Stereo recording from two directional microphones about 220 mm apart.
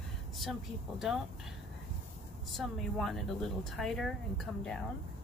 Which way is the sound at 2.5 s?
Centre (ahead or behind).